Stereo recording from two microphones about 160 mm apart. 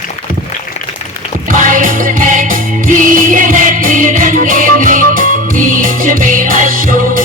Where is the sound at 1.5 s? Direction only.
55° right (ahead or behind).